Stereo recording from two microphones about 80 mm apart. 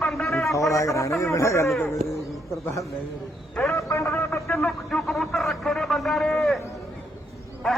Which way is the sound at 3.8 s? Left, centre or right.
Left.